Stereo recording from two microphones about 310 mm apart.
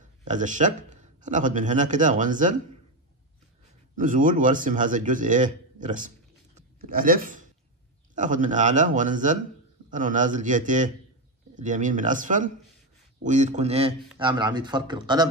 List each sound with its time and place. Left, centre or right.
0.2 s a man's voice: right
3.9 s a man's voice: right